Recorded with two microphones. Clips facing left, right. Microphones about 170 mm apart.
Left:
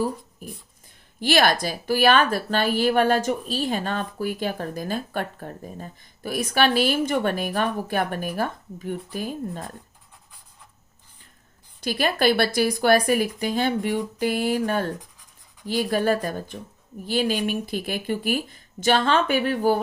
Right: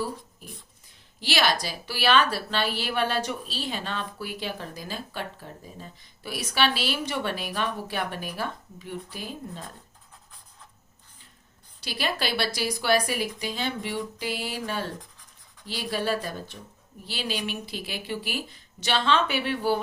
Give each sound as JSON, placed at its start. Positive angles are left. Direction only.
{"t": 1.2, "sound": "speech", "side_deg": 50}
{"t": 11.8, "sound": "speech", "side_deg": 50}